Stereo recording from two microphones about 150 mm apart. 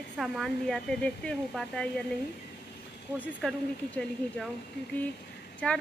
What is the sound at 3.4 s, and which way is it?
Speech, centre (ahead or behind).